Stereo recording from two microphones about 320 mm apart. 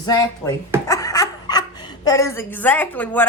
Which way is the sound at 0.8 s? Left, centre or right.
Centre.